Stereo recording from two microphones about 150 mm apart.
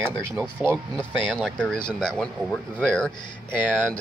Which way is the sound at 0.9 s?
5° left (ahead or behind).